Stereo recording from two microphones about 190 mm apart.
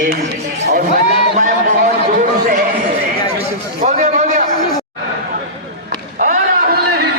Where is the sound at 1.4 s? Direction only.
40° right (ahead or behind).